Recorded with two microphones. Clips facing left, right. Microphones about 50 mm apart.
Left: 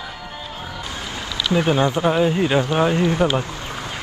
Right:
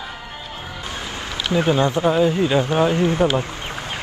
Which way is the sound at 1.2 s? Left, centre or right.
Right.